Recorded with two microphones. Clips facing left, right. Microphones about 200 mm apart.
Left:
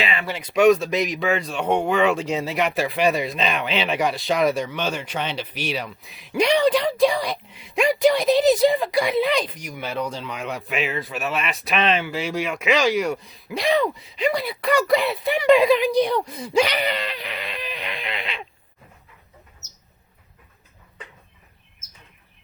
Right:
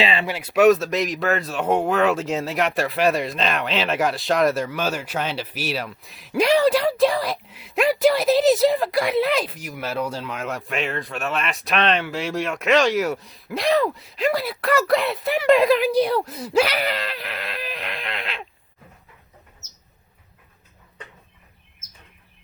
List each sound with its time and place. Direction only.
0.0 s speech: 30° right (ahead or behind)
0.3 s speech: 5° right (ahead or behind)